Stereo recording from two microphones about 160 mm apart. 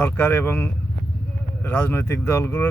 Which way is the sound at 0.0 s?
15° left (ahead or behind).